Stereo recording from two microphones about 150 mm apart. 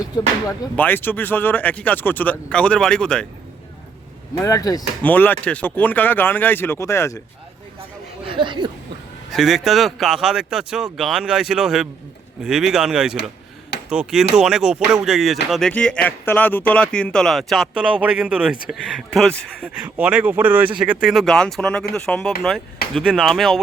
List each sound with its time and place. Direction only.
0.8 s speech: 15° left (ahead or behind)
4.4 s speech: 25° left (ahead or behind)
5.0 s speech: 10° left (ahead or behind)
8.2 s speech: 35° right (ahead or behind)
9.3 s speech: centre (ahead or behind)
19.6 s speech: 10° right (ahead or behind)